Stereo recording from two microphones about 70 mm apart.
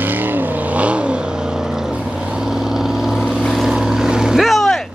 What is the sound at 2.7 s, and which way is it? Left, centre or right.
Vehicle, centre.